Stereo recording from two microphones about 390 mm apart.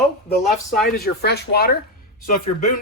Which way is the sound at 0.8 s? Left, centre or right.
Left.